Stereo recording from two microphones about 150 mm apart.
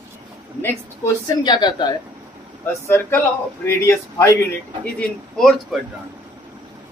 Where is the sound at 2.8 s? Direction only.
20° left (ahead or behind).